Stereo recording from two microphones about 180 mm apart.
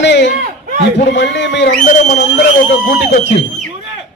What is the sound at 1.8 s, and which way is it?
Speech, 45° left (ahead or behind).